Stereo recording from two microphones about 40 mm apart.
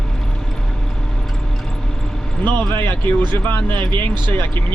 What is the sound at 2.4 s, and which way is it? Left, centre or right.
Speech, left.